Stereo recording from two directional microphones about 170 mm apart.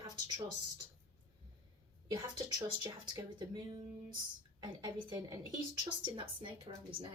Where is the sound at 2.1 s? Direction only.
25° right (ahead or behind).